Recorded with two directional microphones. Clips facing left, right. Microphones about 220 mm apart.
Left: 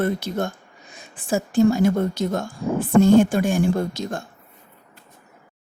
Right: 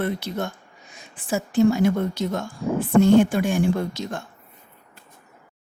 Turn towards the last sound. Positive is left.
turn(degrees=45)  # may be behind; listen again after turning